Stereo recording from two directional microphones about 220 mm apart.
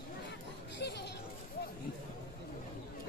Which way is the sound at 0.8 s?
50° left (ahead or behind).